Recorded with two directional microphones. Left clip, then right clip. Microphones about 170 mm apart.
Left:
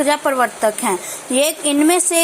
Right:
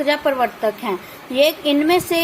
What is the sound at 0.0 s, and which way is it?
A woman's voice, 10° left (ahead or behind).